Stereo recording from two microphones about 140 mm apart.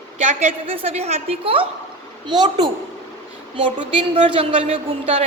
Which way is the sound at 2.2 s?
30° right (ahead or behind).